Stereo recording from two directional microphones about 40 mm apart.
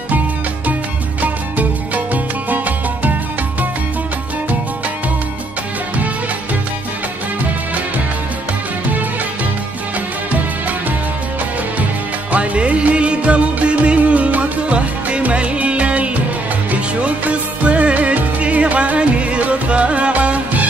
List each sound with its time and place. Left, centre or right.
1.2 s music: right
12.3 s music: right